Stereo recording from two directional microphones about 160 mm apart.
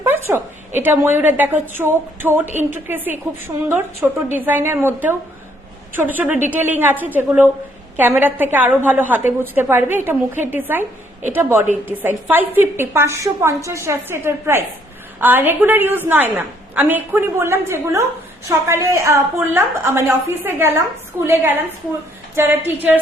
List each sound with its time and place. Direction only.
0.0 s a woman's voice: 15° right (ahead or behind)